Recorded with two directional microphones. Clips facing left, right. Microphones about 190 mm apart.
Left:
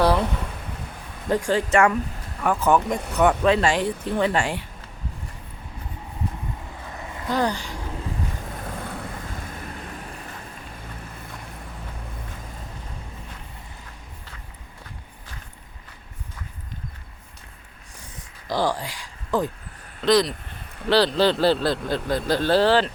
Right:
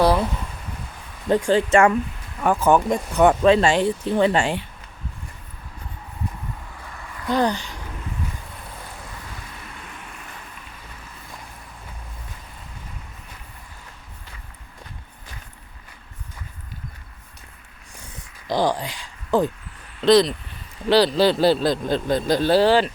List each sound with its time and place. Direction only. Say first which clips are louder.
1.3 s speech: right 4 dB; 25° right (ahead or behind)
6.9 s vehicle: left 4 dB; 20° left (ahead or behind)
7.3 s speech: right 3 dB; 20° right (ahead or behind)
8.5 s waves: left 6 dB; 60° left (ahead or behind); by 10.2 s 35° left (ahead or behind)
18.4 s speech: right 2 dB; 20° right (ahead or behind)
20.9 s speech: right 2 dB; 10° right (ahead or behind)